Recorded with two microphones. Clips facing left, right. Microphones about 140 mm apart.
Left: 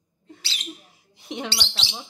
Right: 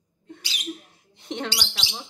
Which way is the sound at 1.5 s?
10° right (ahead or behind).